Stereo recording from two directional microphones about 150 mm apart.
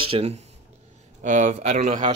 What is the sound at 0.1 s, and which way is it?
Speech, 45° right (ahead or behind).